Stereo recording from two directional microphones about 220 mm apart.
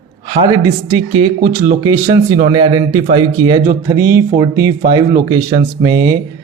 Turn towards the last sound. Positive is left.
turn(degrees=-20)  # may be behind; listen again after turning